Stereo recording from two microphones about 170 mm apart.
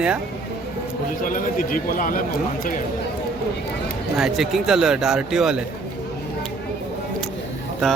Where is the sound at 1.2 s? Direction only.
55° left (ahead or behind).